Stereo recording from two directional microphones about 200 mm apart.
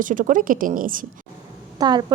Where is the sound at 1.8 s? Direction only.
20° right (ahead or behind).